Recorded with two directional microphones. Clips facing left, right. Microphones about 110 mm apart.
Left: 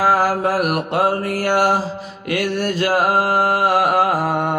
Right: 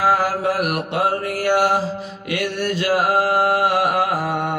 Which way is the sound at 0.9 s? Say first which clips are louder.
Left 2 dB; 45° left (ahead or behind).